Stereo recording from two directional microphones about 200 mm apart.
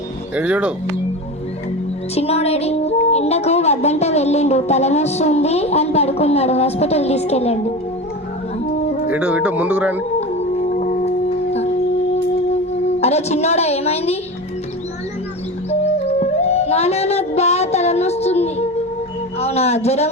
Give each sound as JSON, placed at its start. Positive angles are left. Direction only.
{"t": 0.3, "sound": "speech", "side_deg": -5}
{"t": 2.1, "sound": "a woman's voice", "side_deg": 30}
{"t": 9.0, "sound": "speech", "side_deg": -5}
{"t": 10.7, "sound": "music", "side_deg": 40}
{"t": 13.0, "sound": "a woman's voice", "side_deg": 30}
{"t": 15.8, "sound": "music", "side_deg": 30}
{"t": 19.4, "sound": "a woman's voice", "side_deg": 30}